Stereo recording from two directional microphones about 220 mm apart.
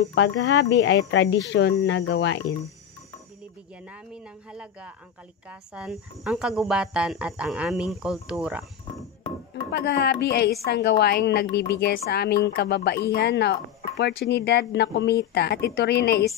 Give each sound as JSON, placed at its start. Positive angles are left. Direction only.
{"t": 0.0, "sound": "speech", "side_deg": 55}
{"t": 4.1, "sound": "speech", "side_deg": -5}
{"t": 9.7, "sound": "speech", "side_deg": 45}